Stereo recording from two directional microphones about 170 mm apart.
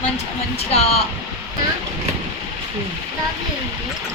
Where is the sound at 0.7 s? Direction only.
40° left (ahead or behind).